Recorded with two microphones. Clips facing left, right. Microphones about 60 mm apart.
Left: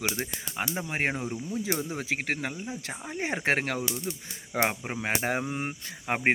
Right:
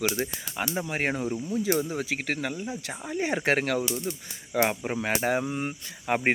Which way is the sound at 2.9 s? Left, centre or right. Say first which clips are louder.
Right 4 dB; centre.